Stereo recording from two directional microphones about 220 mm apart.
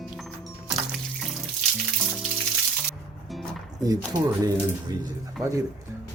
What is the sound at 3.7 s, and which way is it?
Speech, 15° right (ahead or behind).